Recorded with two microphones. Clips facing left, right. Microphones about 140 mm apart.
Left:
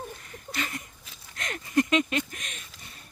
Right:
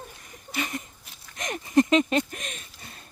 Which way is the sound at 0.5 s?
15° right (ahead or behind).